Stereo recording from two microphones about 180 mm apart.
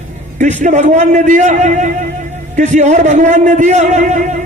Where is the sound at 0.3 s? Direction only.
45° right (ahead or behind).